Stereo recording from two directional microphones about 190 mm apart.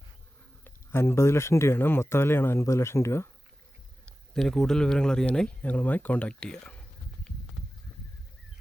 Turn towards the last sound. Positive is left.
turn(degrees=5)  # may be behind; listen again after turning